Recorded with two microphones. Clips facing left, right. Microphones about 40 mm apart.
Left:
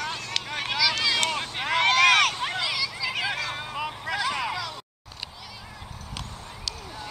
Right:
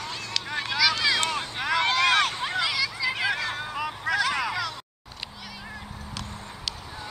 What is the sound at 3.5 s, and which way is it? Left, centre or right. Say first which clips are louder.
Vehicle: right 1 dB; centre.